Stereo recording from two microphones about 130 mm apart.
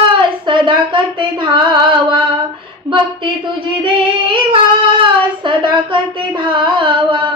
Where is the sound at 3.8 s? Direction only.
40° right (ahead or behind).